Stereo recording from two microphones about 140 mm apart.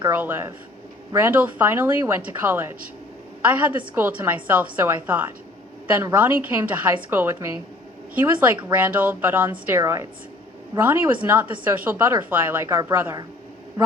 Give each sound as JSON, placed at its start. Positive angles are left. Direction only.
{"t": 0.1, "sound": "a woman's voice", "side_deg": -15}